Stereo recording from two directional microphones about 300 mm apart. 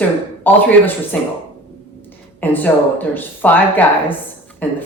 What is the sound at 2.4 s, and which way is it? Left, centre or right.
A woman's voice, centre.